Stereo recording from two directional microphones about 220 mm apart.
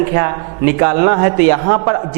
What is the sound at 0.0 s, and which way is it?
A woman's voice, 15° right (ahead or behind).